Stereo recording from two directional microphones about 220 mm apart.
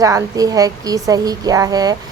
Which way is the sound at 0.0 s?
15° right (ahead or behind).